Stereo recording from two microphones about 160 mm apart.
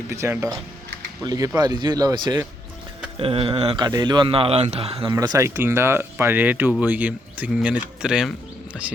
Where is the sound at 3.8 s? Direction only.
25° right (ahead or behind).